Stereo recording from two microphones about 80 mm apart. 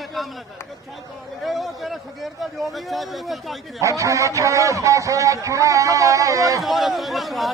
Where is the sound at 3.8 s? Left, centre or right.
Right.